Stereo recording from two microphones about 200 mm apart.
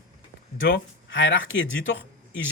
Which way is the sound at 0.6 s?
75° left (ahead or behind).